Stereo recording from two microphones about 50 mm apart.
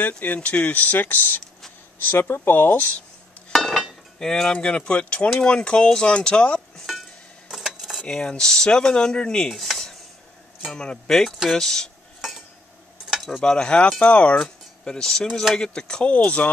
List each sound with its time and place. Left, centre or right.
0.2 s speech: left
3.5 s a sound: centre
4.2 s speech: centre
7.5 s dishes: centre
8.0 s speech: centre
9.5 s dishes: centre
10.7 s speech: centre
12.2 s a sound: centre
13.1 s cutlery: centre
13.4 s speech: centre
14.4 s speech: centre